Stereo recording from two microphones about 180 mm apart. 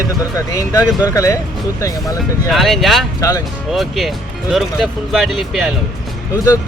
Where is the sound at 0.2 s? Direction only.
20° left (ahead or behind).